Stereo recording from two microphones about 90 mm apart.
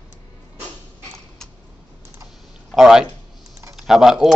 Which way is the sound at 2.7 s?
5° right (ahead or behind).